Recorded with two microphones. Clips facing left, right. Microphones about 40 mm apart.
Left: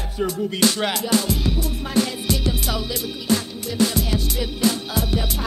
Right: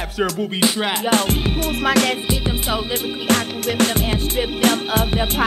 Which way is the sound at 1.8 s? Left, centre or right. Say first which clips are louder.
Right 6 dB; right.